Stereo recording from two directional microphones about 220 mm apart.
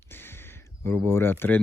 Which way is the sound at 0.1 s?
10° left (ahead or behind).